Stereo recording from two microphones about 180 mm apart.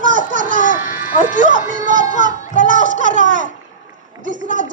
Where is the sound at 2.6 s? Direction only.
45° right (ahead or behind).